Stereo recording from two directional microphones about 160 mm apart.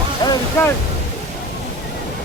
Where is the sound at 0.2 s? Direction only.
25° left (ahead or behind).